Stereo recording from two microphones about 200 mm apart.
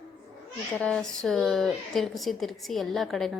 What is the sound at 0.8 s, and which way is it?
Speech, 5° left (ahead or behind).